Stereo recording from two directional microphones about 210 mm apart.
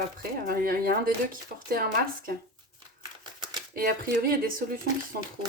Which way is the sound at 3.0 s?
20° right (ahead or behind).